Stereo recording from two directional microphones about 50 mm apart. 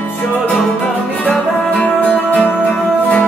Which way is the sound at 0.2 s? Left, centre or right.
Left.